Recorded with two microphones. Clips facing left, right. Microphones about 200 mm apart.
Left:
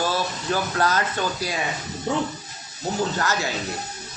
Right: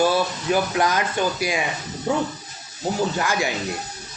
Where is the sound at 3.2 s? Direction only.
15° right (ahead or behind).